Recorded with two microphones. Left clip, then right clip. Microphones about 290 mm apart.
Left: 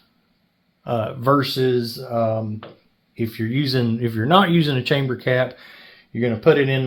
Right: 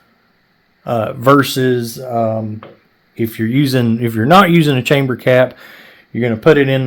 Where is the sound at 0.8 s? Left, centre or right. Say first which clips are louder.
Right 7 dB; right.